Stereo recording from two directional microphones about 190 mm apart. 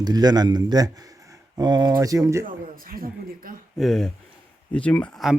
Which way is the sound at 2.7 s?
50° right (ahead or behind).